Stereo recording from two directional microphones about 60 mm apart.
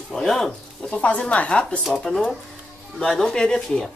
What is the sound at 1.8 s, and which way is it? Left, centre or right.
Cutlery, centre.